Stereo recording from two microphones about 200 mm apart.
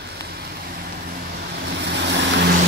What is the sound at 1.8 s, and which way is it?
Vehicle, 60° right (ahead or behind).